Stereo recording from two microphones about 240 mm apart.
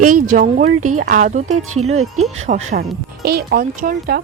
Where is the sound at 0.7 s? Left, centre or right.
Right.